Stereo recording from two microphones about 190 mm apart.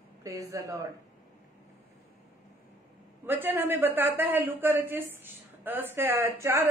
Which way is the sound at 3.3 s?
10° right (ahead or behind).